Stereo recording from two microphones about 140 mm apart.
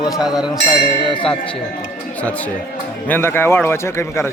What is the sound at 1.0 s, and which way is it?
Speech, 35° left (ahead or behind).